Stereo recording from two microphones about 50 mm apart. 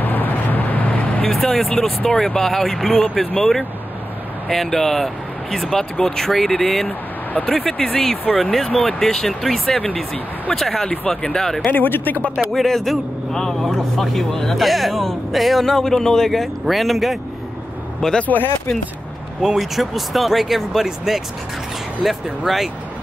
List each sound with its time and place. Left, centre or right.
0.0 s vehicle: left
1.3 s speech: centre
11.7 s speech: left
12.5 s speech: centre
18.2 s speech: left
19.4 s speech: centre